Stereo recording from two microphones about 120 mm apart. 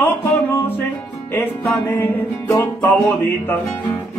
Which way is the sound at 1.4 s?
20° left (ahead or behind).